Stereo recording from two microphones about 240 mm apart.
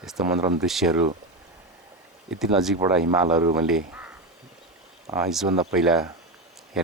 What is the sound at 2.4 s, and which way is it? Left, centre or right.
Speech, centre.